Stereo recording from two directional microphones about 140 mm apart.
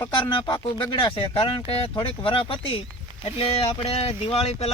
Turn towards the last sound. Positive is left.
turn(degrees=45)  # may be behind; listen again after turning